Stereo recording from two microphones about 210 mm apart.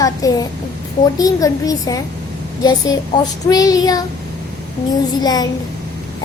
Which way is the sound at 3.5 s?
15° left (ahead or behind).